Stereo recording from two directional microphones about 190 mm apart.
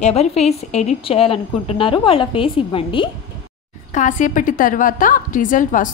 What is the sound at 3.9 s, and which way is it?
A woman's voice, 40° left (ahead or behind).